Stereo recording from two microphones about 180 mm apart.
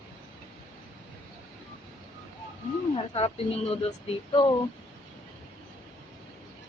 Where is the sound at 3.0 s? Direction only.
30° left (ahead or behind).